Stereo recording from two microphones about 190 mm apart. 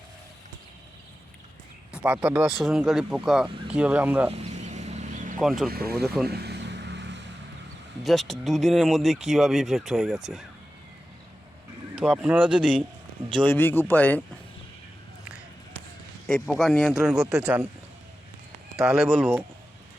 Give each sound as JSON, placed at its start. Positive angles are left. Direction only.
{"t": 1.9, "sound": "speech", "side_deg": -5}
{"t": 4.3, "sound": "a sound", "side_deg": -35}
{"t": 5.4, "sound": "speech", "side_deg": 0}
{"t": 5.7, "sound": "speech", "side_deg": -55}
{"t": 6.2, "sound": "vehicle", "side_deg": -60}
{"t": 8.0, "sound": "speech", "side_deg": 0}
{"t": 11.9, "sound": "speech", "side_deg": -5}
{"t": 13.3, "sound": "a man's voice", "side_deg": 10}
{"t": 16.2, "sound": "speech", "side_deg": 0}
{"t": 18.8, "sound": "speech", "side_deg": 0}